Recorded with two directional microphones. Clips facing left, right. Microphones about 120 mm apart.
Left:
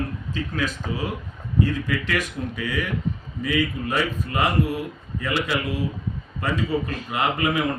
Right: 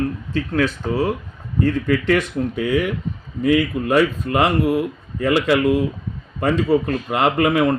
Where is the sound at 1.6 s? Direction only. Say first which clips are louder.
Right 8 dB; 55° right (ahead or behind).